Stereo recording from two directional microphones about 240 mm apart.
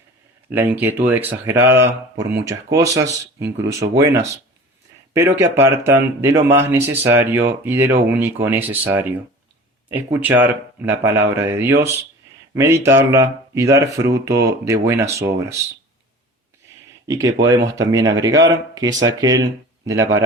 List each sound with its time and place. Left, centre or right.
0.5 s speech: centre
17.1 s speech: centre